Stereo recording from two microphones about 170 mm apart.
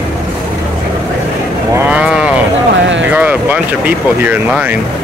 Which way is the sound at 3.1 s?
10° right (ahead or behind).